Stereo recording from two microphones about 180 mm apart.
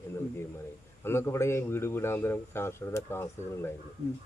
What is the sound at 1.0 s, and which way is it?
A man's voice, 15° left (ahead or behind).